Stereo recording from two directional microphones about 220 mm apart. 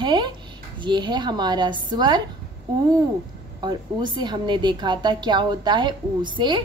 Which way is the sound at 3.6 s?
20° right (ahead or behind).